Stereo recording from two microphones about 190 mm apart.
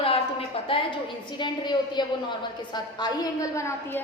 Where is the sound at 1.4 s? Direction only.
25° left (ahead or behind).